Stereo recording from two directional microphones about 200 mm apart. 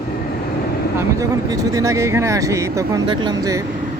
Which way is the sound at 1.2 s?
15° right (ahead or behind).